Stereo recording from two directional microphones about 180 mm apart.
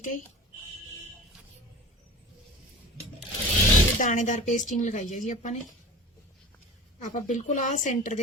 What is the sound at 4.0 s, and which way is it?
Speech, 45° left (ahead or behind).